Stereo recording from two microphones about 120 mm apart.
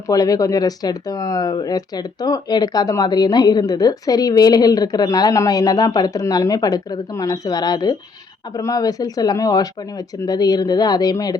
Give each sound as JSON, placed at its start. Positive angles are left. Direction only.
{"t": 0.1, "sound": "speech", "side_deg": 30}